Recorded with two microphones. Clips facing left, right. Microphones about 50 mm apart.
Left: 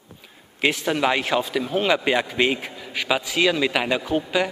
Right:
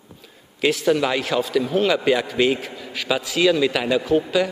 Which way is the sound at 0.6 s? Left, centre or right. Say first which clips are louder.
Right 2 dB; centre.